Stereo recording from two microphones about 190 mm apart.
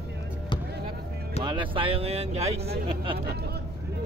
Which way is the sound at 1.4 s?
25° right (ahead or behind).